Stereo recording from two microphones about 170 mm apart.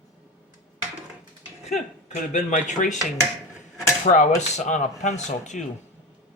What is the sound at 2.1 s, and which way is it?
Speech, 45° left (ahead or behind).